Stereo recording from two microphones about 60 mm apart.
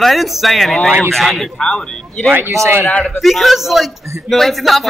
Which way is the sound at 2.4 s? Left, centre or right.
Right.